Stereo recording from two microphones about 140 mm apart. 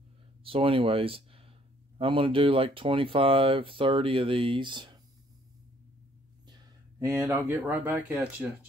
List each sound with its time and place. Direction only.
0.4 s speech: 40° right (ahead or behind)
6.4 s speech: 25° right (ahead or behind); by 8.5 s 10° right (ahead or behind)